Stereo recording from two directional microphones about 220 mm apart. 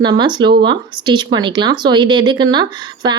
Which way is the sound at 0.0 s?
20° right (ahead or behind).